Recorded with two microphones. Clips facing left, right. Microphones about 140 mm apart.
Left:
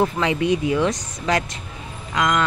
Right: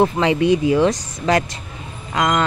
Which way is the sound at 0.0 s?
30° right (ahead or behind).